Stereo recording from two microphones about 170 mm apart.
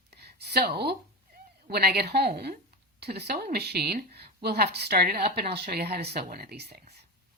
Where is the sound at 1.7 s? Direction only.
65° right (ahead or behind).